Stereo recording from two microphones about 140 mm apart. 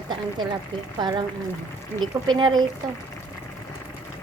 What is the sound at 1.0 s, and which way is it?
A woman's voice, 35° right (ahead or behind).